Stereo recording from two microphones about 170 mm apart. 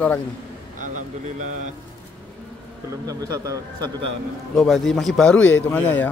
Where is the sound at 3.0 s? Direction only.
20° right (ahead or behind).